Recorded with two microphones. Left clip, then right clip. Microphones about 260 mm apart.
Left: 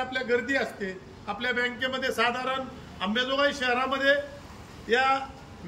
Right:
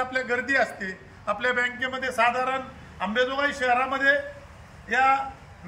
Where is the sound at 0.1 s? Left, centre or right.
Centre.